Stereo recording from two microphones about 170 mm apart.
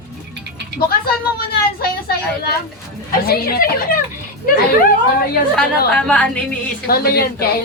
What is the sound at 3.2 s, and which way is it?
Speech, 65° left (ahead or behind).